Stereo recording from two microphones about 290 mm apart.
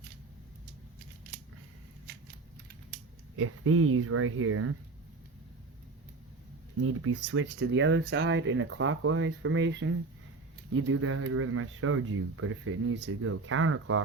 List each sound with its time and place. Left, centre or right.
3.3 s speech: right
6.7 s speech: right